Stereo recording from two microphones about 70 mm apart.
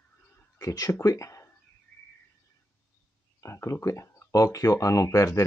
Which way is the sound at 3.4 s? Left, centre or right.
Left.